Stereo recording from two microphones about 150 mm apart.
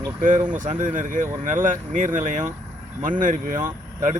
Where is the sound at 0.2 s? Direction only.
60° right (ahead or behind).